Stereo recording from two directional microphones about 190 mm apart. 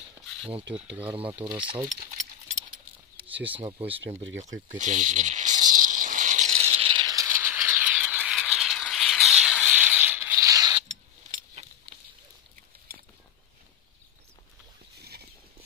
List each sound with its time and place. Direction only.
1.1 s speech: 30° right (ahead or behind)
1.9 s a sound: 40° right (ahead or behind)
3.3 s speech: 10° right (ahead or behind)
3.5 s speech: 30° right (ahead or behind)
4.4 s snake: 40° right (ahead or behind); by 10.8 s 20° right (ahead or behind)